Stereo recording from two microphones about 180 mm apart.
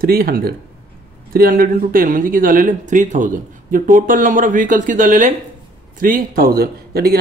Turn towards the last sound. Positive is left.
turn(degrees=-60)  # may be behind; listen again after turning